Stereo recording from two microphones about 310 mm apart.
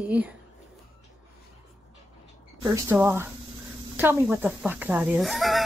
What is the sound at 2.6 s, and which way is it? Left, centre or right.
Speech, centre.